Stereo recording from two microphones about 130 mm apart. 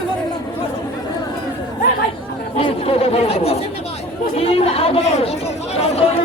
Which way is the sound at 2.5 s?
45° left (ahead or behind).